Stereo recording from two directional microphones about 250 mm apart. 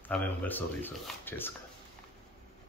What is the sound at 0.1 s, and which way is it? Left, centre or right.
Speech, centre.